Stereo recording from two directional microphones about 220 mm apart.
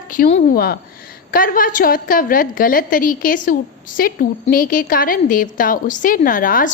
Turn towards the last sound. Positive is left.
turn(degrees=40)  # may be behind; listen again after turning